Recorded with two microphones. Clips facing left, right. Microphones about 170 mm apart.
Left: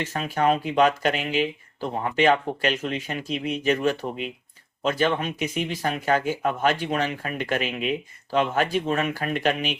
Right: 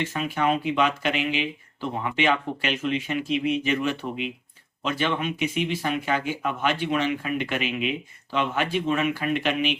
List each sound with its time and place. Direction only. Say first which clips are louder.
0.0 s speech: left 2 dB; 40° left (ahead or behind)